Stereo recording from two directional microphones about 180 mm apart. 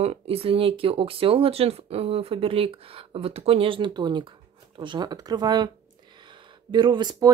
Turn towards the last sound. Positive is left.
turn(degrees=-25)  # may be behind; listen again after turning